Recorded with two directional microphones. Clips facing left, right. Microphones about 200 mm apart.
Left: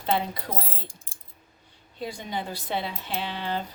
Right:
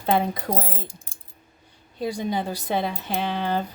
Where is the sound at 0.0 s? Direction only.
50° right (ahead or behind).